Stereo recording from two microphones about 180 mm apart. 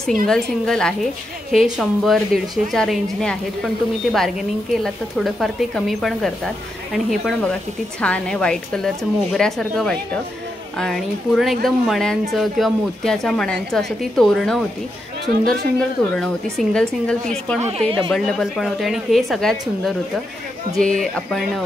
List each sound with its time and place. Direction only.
0.0 s a woman's voice: 5° left (ahead or behind)
16.0 s a woman's voice: 5° left (ahead or behind)
17.6 s a woman's voice: 35° right (ahead or behind)
18.1 s a woman's voice: centre (ahead or behind)
20.7 s a woman's voice: 5° left (ahead or behind)